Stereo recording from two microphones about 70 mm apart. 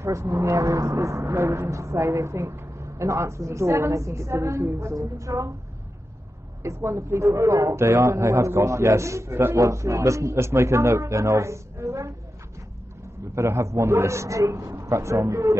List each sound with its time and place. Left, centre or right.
0.0 s speech: right
6.6 s speech: right
13.3 s speech: right